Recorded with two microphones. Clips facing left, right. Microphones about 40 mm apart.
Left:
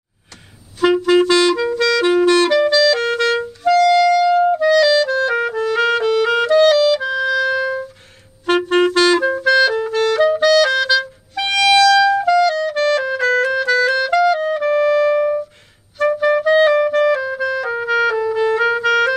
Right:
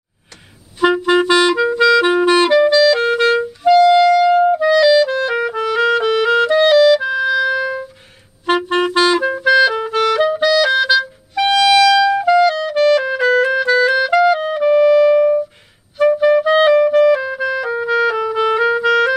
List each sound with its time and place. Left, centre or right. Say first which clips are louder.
1.0 s clarinet: even; centre
3.3 s clarinet: right 4 dB; centre
9.8 s clarinet: right 1 dB; right
10.1 s clarinet: left 3 dB; centre
11.5 s music: even; centre
16.0 s clarinet: right 4 dB; centre
16.3 s music: right 2 dB; centre
17.1 s clarinet: right 2 dB; centre
17.6 s music: right 1 dB; centre
18.3 s music: right 1 dB; right
18.6 s clarinet: right 1 dB; centre